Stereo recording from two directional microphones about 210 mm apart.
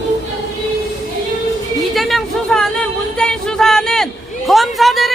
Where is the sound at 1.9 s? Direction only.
Centre (ahead or behind).